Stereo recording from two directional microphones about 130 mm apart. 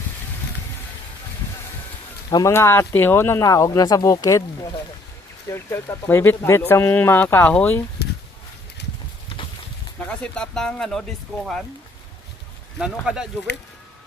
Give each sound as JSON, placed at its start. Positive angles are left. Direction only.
{"t": 2.3, "sound": "speech", "side_deg": 20}
{"t": 5.5, "sound": "speech", "side_deg": 20}
{"t": 10.1, "sound": "speech", "side_deg": 5}
{"t": 12.8, "sound": "speech", "side_deg": -5}